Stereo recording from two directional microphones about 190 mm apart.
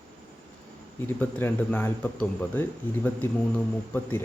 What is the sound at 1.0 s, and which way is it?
Speech, 10° left (ahead or behind).